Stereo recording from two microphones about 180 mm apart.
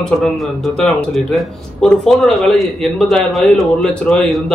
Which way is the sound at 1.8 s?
5° left (ahead or behind).